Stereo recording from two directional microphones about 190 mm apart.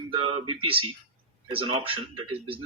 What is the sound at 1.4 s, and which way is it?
Speech, 25° right (ahead or behind).